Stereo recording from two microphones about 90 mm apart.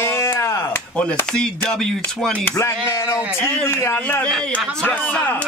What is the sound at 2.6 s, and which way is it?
Speech, 30° left (ahead or behind).